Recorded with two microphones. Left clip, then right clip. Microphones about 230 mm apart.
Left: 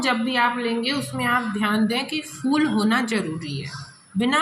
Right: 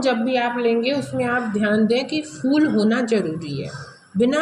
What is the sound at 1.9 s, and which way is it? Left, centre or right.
A woman's voice, left.